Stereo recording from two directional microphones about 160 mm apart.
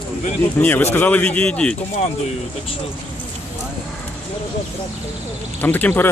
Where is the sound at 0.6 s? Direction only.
10° left (ahead or behind).